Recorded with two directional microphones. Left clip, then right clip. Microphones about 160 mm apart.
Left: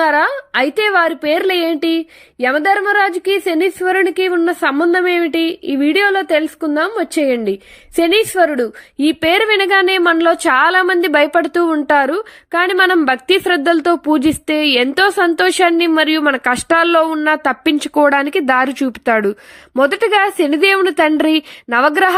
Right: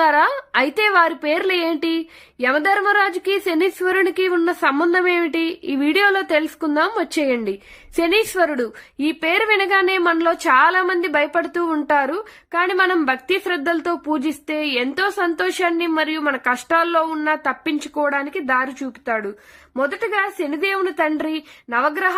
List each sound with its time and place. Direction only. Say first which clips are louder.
0.0 s a woman's voice: left 2 dB; 20° left (ahead or behind); by 22.1 s 40° left (ahead or behind)